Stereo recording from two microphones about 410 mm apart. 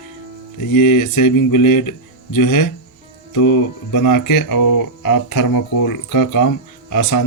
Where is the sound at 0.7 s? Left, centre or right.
Left.